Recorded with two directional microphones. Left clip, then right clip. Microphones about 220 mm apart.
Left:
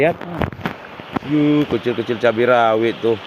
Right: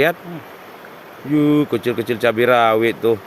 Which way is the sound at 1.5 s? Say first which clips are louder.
Even; 25° right (ahead or behind).